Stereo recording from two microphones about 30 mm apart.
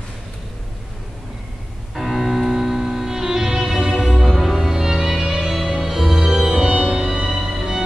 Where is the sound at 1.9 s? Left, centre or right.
Centre; by 4.0 s right.